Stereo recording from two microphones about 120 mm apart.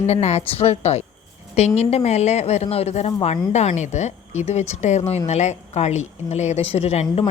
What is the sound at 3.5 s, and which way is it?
A woman's voice, 75° left (ahead or behind).